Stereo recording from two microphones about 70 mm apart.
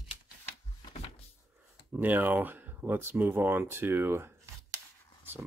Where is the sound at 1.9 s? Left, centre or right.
Right.